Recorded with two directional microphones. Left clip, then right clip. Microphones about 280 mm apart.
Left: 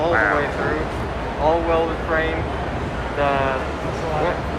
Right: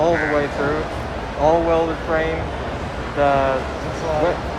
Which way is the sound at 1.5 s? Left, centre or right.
Right.